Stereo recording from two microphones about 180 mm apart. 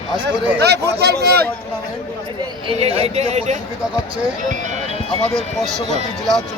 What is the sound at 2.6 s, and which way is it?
Speech, 35° right (ahead or behind).